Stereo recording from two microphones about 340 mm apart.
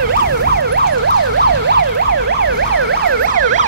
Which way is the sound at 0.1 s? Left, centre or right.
Right.